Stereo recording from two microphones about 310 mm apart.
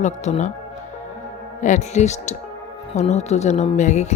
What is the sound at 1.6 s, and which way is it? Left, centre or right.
Speech, left.